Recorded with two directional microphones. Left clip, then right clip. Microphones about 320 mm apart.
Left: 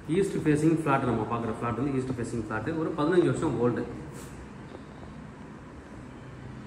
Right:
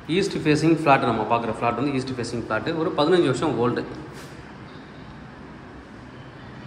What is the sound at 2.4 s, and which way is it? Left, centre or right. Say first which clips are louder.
Speech: right 8 dB; centre.